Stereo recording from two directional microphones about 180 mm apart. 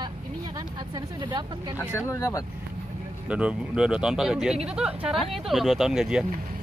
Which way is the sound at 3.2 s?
5° right (ahead or behind).